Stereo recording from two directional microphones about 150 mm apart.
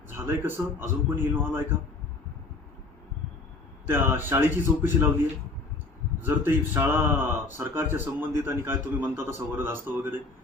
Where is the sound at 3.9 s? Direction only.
15° right (ahead or behind).